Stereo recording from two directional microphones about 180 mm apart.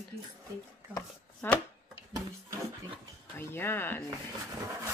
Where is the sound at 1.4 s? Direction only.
10° left (ahead or behind).